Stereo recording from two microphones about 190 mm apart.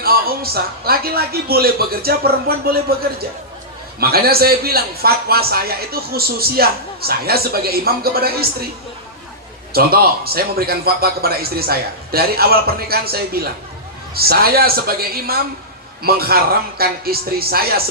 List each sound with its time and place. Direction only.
0.0 s a man's voice: 55° right (ahead or behind)
4.0 s a man's voice: 55° right (ahead or behind)
9.7 s a man's voice: 55° right (ahead or behind)